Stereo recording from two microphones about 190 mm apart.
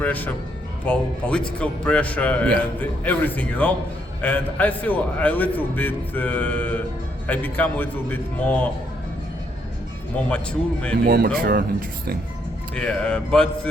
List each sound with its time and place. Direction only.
0.0 s a man's voice: 10° left (ahead or behind)
10.2 s speech: 5° left (ahead or behind)
11.0 s speech: 50° right (ahead or behind)
12.7 s speech: 5° left (ahead or behind)